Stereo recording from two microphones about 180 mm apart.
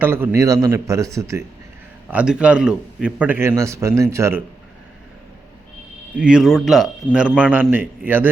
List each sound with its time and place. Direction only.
0.0 s a man's voice: 10° right (ahead or behind)
2.0 s a man's voice: 5° right (ahead or behind)
6.1 s a man's voice: 5° right (ahead or behind)